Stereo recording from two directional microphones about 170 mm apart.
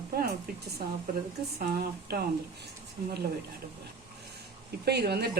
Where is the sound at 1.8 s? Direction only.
65° right (ahead or behind).